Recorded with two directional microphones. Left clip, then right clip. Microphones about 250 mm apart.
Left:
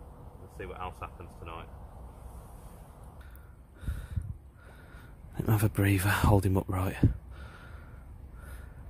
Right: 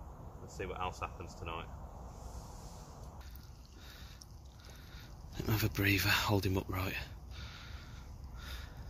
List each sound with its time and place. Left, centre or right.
0.6 s speech: centre
5.3 s speech: left